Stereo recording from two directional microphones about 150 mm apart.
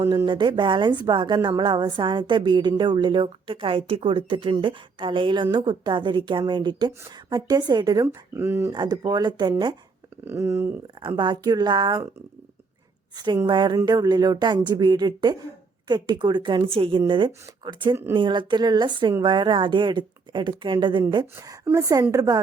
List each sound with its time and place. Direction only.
0.1 s a woman's voice: 30° right (ahead or behind)
8.0 s speech: 15° right (ahead or behind)
8.7 s speech: 30° right (ahead or behind)
10.2 s speech: 15° right (ahead or behind)
11.2 s speech: 30° right (ahead or behind)
13.1 s a woman's voice: 30° right (ahead or behind)